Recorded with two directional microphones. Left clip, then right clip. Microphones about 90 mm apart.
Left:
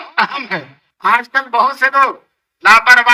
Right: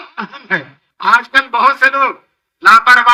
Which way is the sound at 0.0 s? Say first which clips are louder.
Left 10 dB; 45° left (ahead or behind).